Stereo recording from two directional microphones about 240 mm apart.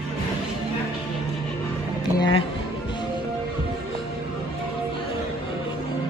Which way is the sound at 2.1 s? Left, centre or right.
Centre.